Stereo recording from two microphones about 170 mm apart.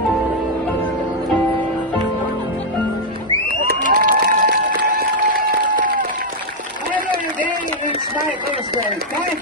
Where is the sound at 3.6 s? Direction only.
60° right (ahead or behind).